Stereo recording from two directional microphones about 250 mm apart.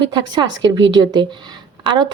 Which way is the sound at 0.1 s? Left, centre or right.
Centre.